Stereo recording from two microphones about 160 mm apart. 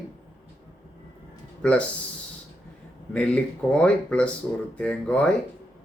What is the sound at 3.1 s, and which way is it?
A man's voice, 5° left (ahead or behind).